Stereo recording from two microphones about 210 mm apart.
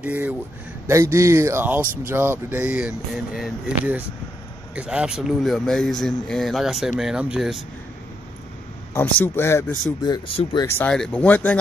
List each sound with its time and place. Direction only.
0.0 s speech: 5° right (ahead or behind)
8.9 s speech: 10° left (ahead or behind)
10.0 s speech: 20° left (ahead or behind)
10.8 s speech: 5° left (ahead or behind)